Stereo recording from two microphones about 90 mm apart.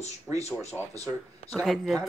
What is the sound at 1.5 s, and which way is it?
Speech, centre (ahead or behind).